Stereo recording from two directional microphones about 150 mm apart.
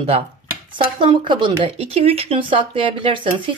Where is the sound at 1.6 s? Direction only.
40° right (ahead or behind).